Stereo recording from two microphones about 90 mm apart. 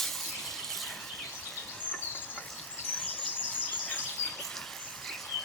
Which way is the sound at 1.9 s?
20° left (ahead or behind).